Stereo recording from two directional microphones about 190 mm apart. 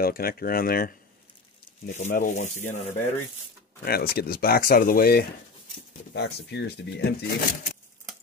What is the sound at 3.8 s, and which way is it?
Speech, 55° left (ahead or behind).